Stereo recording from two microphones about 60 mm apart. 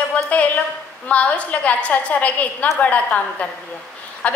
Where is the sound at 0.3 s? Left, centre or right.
Left.